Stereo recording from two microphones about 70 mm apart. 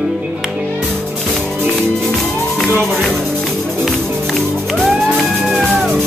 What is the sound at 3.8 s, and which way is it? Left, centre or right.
Music, centre.